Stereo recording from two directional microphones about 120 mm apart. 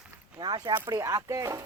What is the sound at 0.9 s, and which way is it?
Speech, 30° right (ahead or behind).